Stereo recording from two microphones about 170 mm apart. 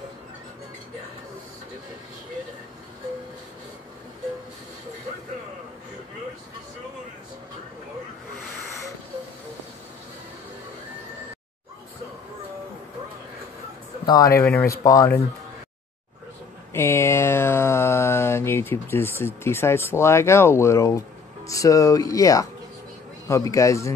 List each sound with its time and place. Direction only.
14.0 s speech: 20° left (ahead or behind)
14.4 s speech: 5° left (ahead or behind)
14.7 s speech: 20° left (ahead or behind)
16.7 s a sound: 15° left (ahead or behind)
21.5 s speech: 20° left (ahead or behind)
23.2 s a sound: 20° left (ahead or behind)